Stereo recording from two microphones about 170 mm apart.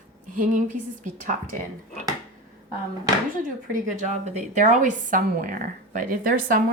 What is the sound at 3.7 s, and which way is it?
A woman's voice, 45° right (ahead or behind).